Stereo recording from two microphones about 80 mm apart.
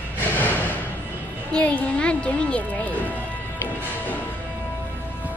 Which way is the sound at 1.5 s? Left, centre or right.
Centre.